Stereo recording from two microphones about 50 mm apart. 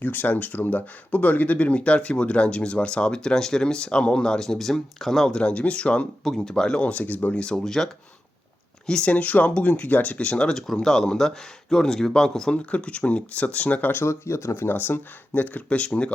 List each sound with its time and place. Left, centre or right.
0.0 s speech: left; by 5.3 s centre
5.3 s speech: left
6.2 s speech: centre
6.8 s speech: left
7.4 s speech: centre
9.0 s speech: left
13.9 s speech: left
14.5 s speech: left
15.3 s speech: left